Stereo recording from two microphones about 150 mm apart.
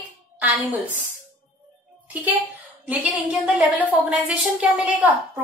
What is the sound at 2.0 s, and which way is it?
A child's voice, 10° right (ahead or behind).